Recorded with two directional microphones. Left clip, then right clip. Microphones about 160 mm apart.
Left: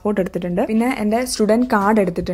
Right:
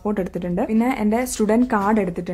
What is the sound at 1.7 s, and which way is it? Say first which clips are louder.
Speech: left 4 dB; 15° left (ahead or behind).